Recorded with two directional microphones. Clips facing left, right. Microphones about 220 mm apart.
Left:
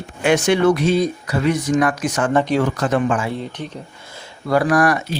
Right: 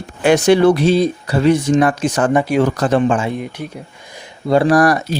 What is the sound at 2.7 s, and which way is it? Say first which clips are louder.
Speech: right 4 dB; 35° right (ahead or behind).